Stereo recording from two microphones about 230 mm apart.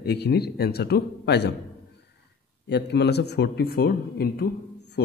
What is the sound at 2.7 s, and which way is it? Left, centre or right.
Speech, left.